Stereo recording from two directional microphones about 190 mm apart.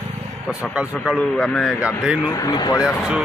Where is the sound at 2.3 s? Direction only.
15° left (ahead or behind).